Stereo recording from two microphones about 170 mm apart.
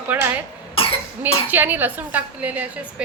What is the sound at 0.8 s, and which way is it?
Cough, 35° left (ahead or behind).